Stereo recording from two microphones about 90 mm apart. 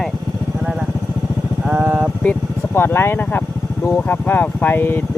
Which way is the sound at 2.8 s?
25° left (ahead or behind).